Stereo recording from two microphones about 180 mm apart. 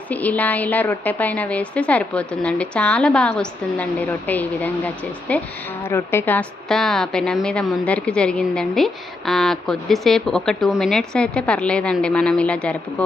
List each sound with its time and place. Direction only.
0.1 s a woman's voice: 10° left (ahead or behind)